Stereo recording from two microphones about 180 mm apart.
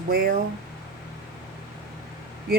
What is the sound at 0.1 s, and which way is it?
Speech, 55° right (ahead or behind).